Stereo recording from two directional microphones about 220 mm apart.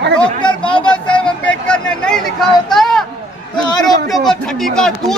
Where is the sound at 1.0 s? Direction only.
5° left (ahead or behind).